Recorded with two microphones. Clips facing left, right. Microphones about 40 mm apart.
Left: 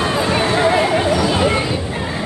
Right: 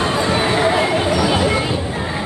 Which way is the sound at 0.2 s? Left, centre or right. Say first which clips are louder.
Left 1 dB; centre.